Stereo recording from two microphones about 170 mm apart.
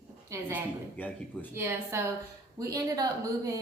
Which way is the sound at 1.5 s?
15° right (ahead or behind).